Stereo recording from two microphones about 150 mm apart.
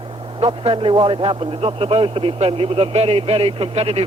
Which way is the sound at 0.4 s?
35° right (ahead or behind).